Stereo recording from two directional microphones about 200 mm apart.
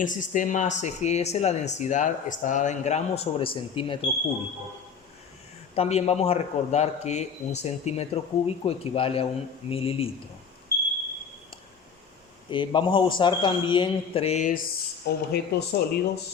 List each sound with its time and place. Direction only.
0.0 s speech: 40° left (ahead or behind)
5.7 s a man's voice: 30° left (ahead or behind)
12.5 s a man's voice: 25° left (ahead or behind)
15.0 s speech: 50° left (ahead or behind)